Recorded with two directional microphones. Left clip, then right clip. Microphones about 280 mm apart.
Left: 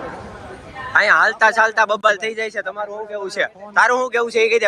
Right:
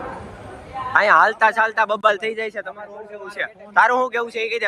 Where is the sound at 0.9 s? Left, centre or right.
Centre.